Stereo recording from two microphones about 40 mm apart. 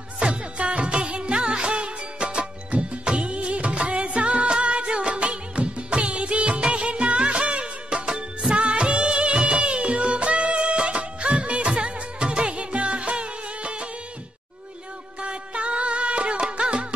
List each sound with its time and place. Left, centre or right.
0.2 s music: right
15.2 s music: right